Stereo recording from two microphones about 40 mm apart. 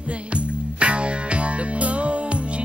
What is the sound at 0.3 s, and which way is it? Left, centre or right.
Music, right.